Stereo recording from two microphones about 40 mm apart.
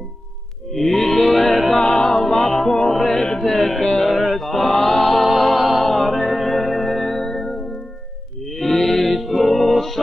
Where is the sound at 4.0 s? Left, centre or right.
Centre.